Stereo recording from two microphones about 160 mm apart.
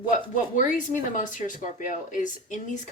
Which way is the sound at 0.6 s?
55° left (ahead or behind).